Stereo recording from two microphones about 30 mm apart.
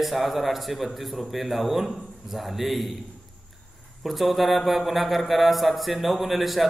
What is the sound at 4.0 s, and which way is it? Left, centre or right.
A man's voice, centre.